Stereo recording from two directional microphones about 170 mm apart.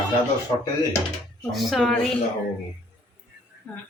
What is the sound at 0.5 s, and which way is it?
Speech, 25° left (ahead or behind).